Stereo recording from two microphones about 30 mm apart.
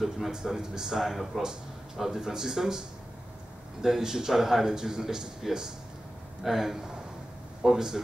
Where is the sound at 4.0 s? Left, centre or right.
Centre.